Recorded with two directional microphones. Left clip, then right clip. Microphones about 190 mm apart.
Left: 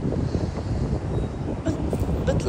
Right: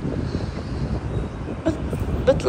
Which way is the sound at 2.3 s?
10° left (ahead or behind).